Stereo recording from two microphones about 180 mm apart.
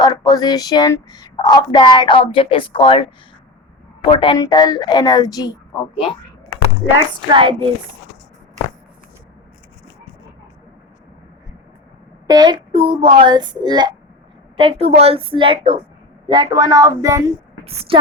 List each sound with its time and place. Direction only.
0.0 s speech: 20° left (ahead or behind)
7.3 s speech: 30° right (ahead or behind)
12.3 s speech: 25° right (ahead or behind)